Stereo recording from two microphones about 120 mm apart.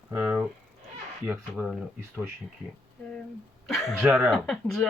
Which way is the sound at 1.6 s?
20° right (ahead or behind).